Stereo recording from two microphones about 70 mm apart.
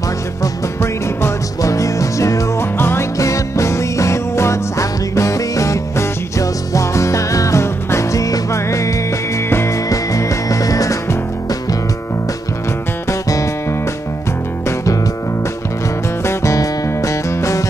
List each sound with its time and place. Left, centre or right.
0.4 s music: left
2.8 s music: left
3.2 s music: left
9.5 s music: left
9.8 s music: left
16.3 s music: left